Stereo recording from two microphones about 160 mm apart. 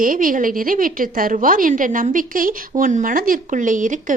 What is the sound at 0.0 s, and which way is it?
A woman's voice, 60° right (ahead or behind).